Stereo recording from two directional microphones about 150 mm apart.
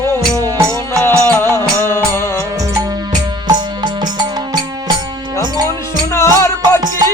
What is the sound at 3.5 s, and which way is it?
Music, 30° right (ahead or behind).